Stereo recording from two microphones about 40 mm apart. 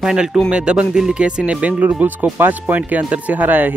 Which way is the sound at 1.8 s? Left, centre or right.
Right.